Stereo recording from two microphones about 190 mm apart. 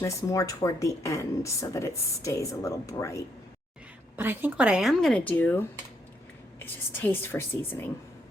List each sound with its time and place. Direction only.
0.0 s speech: 15° left (ahead or behind)
4.2 s a woman's voice: 10° right (ahead or behind); by 7.9 s 10° left (ahead or behind)